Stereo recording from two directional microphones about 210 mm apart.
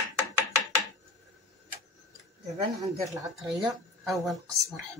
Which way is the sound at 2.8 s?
15° right (ahead or behind).